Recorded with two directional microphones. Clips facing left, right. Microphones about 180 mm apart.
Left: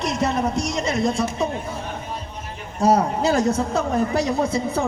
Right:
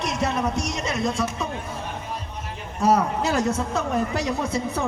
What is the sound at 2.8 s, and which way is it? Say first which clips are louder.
A man's voice: left 2 dB; 40° left (ahead or behind).